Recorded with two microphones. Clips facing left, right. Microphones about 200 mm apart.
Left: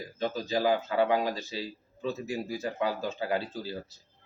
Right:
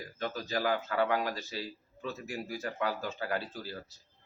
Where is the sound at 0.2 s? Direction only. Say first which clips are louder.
Left 5 dB; 20° left (ahead or behind).